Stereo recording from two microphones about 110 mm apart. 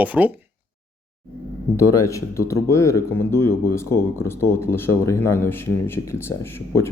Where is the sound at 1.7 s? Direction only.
30° left (ahead or behind).